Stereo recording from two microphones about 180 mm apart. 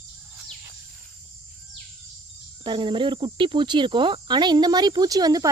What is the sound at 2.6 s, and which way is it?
Speech, 25° right (ahead or behind).